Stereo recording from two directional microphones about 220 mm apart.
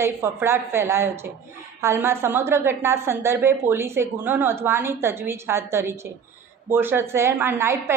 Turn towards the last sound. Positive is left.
turn(degrees=-10)  # may be behind; listen again after turning